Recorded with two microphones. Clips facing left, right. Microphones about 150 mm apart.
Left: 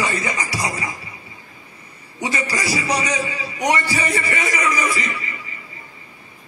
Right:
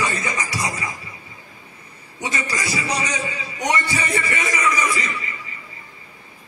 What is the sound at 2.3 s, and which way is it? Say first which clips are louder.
Speech: left 3 dB; 30° left (ahead or behind).